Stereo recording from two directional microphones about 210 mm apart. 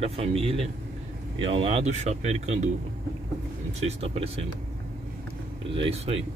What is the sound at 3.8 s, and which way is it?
Speech, 30° right (ahead or behind).